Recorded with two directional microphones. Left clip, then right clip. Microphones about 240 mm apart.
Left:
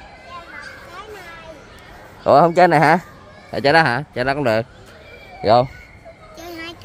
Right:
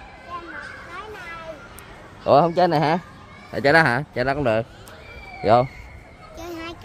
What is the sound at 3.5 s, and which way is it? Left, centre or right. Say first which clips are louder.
A man's voice: left 2 dB; centre.